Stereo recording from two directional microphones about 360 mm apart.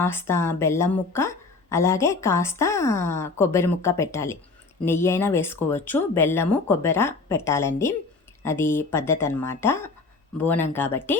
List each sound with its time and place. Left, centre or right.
0.0 s speech: centre